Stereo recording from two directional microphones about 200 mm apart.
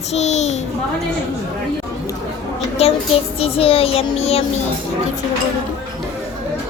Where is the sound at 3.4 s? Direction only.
30° left (ahead or behind).